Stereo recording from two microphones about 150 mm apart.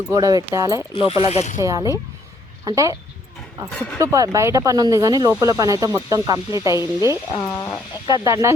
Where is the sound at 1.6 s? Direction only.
20° right (ahead or behind).